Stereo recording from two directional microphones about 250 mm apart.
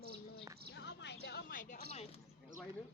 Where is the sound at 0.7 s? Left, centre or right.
Left.